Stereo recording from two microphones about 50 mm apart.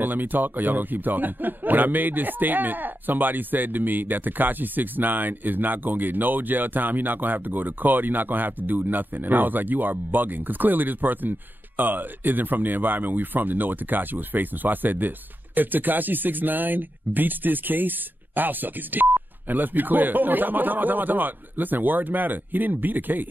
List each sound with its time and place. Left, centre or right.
0.0 s speech: right